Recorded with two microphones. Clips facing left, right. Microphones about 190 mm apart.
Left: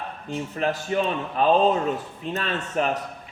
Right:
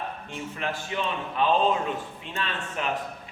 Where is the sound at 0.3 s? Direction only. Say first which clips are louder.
Left 9 dB; 40° left (ahead or behind).